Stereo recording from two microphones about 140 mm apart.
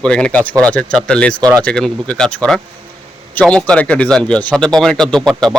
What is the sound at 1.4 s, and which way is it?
Speech, 30° right (ahead or behind).